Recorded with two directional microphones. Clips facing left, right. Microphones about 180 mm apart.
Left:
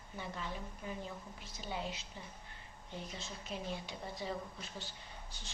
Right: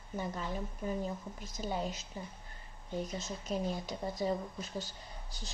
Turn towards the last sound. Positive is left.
turn(degrees=-40)  # may be behind; listen again after turning